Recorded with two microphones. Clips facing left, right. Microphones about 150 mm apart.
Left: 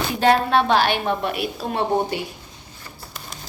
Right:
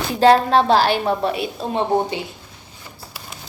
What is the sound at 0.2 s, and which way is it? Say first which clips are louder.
A woman's voice: right 4 dB; 35° right (ahead or behind).